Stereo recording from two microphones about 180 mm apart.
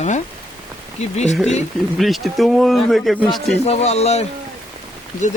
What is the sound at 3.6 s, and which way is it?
Speech, 35° left (ahead or behind).